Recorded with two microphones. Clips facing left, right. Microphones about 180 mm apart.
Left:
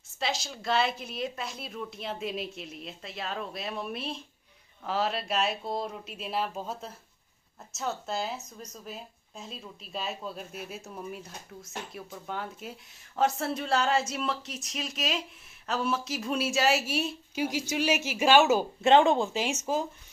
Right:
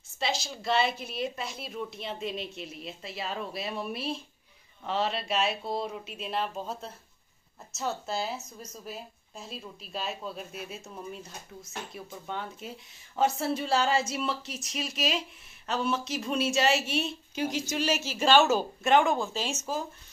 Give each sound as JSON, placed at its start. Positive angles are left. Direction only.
{"t": 0.2, "sound": "speech", "side_deg": 0}
{"t": 18.9, "sound": "speech", "side_deg": 25}